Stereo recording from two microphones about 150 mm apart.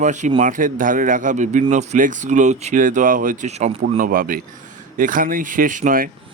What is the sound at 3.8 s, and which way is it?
Speech, 65° right (ahead or behind).